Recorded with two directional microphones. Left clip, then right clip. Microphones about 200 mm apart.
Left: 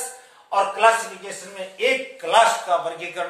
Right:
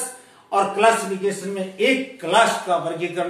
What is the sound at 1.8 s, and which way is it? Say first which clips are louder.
A man's voice: right 1 dB; 15° left (ahead or behind).